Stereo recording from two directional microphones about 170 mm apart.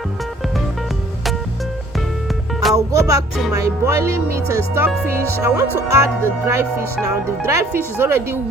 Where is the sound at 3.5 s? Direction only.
20° right (ahead or behind).